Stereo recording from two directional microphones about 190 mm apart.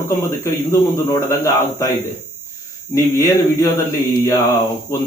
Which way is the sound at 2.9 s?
15° left (ahead or behind).